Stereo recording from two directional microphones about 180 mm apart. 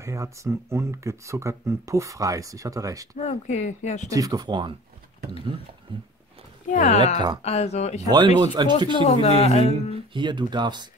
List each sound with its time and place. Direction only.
0.0 s speech: 15° right (ahead or behind)
3.2 s speech: 40° left (ahead or behind)
4.1 s speech: 20° right (ahead or behind)
5.9 s speech: 25° right (ahead or behind)
6.7 s speech: 40° left (ahead or behind)
8.4 s speech: 25° right (ahead or behind)
8.9 s speech: 35° left (ahead or behind)
10.1 s speech: 25° right (ahead or behind)